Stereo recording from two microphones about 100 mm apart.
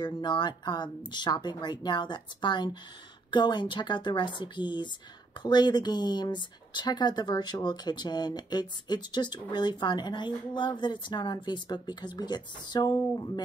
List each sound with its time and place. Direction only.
0.0 s speech: 50° left (ahead or behind)